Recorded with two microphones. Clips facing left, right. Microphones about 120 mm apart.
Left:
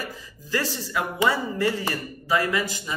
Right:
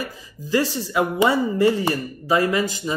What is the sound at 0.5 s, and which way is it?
Speech, 20° right (ahead or behind).